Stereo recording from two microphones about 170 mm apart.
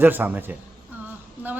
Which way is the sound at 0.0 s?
10° right (ahead or behind).